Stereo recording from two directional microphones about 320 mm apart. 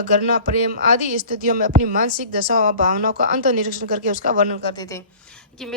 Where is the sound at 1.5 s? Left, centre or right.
Right.